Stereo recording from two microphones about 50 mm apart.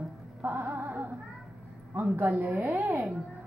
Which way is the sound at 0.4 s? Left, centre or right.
Right.